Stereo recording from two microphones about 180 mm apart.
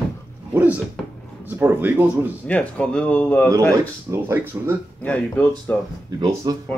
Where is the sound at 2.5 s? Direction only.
5° left (ahead or behind).